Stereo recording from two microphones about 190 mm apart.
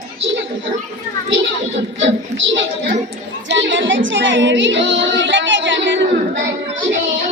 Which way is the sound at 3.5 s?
75° right (ahead or behind).